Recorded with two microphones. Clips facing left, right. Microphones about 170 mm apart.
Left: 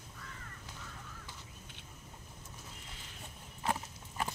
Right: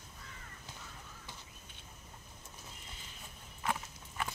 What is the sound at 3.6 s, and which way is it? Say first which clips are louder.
Clip-clop: left 1 dB; 35° left (ahead or behind).